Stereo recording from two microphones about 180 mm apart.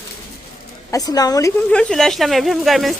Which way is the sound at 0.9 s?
20° left (ahead or behind).